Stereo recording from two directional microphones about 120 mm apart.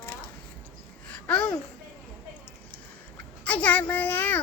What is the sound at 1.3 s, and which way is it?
Babbling, 10° left (ahead or behind).